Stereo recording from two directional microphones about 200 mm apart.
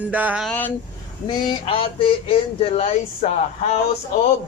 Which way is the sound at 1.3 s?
25° left (ahead or behind).